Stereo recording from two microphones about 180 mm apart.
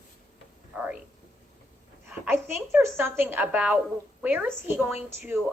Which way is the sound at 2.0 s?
10° right (ahead or behind).